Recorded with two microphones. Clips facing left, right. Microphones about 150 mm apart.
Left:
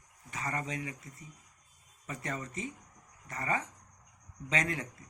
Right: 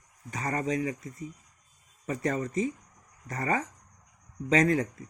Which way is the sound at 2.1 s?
40° right (ahead or behind).